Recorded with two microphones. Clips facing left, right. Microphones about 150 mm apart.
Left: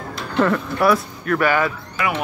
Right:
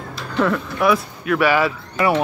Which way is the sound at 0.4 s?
Centre (ahead or behind).